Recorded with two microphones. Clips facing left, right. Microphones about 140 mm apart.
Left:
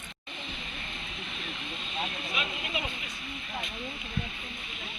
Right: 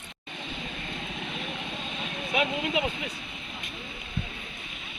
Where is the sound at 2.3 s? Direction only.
70° right (ahead or behind).